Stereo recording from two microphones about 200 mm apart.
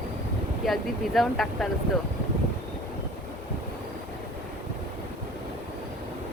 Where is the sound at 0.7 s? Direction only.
Centre (ahead or behind).